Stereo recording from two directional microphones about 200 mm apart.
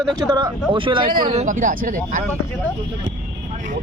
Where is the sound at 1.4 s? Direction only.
40° right (ahead or behind).